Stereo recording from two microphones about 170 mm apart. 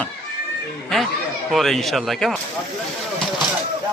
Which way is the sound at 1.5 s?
Centre (ahead or behind).